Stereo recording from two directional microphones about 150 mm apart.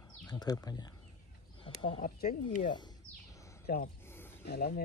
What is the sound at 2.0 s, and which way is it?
Speech, 60° left (ahead or behind).